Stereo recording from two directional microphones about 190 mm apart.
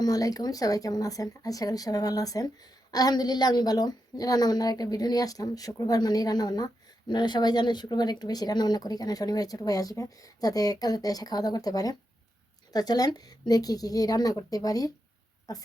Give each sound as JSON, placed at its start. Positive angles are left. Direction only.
{"t": 0.0, "sound": "speech", "side_deg": 20}